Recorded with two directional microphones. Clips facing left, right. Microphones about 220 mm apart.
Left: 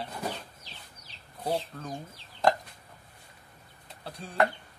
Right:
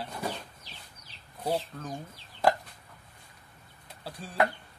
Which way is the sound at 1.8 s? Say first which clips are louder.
Even; centre (ahead or behind).